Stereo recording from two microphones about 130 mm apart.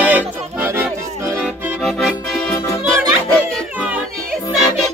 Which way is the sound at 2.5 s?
25° left (ahead or behind).